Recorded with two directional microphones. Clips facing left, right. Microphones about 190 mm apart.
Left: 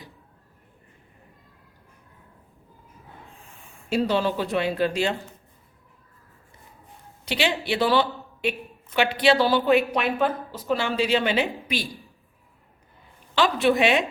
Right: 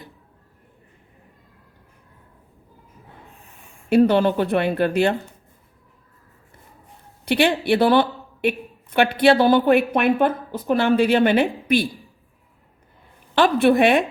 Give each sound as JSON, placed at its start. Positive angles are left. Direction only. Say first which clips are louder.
{"t": 3.8, "sound": "speech", "louder": "right 7 dB", "side_deg": -55}
{"t": 7.3, "sound": "speech", "louder": "right 7 dB", "side_deg": -55}
{"t": 13.3, "sound": "a woman's voice", "louder": "right 5 dB", "side_deg": -55}